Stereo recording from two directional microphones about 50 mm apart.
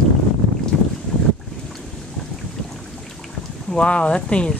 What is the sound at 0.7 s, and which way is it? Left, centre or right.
Boat, centre.